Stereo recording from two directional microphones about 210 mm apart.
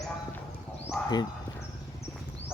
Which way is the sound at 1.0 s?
5° left (ahead or behind).